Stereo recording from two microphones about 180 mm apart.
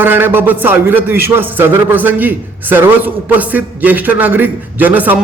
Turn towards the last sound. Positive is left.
turn(degrees=-10)  # may be behind; listen again after turning